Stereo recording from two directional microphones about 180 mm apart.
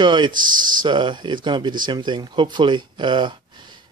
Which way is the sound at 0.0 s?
25° right (ahead or behind).